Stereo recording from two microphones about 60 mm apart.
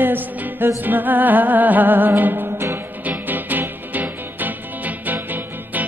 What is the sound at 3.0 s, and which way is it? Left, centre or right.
Music, right.